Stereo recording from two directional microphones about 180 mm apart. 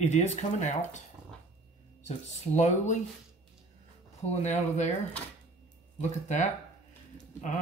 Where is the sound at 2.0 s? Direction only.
40° left (ahead or behind).